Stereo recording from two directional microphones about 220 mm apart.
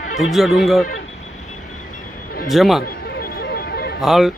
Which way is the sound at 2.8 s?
45° left (ahead or behind).